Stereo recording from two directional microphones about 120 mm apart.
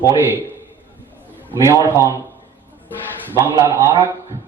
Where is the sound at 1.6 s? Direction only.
25° right (ahead or behind).